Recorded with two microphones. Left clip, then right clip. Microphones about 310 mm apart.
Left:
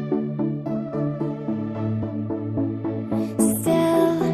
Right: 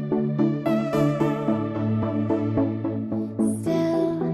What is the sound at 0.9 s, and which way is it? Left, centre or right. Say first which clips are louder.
Music: right 3 dB; right.